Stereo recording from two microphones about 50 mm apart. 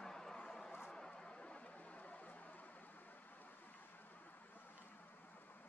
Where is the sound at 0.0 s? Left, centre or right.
Centre; by 2.3 s left.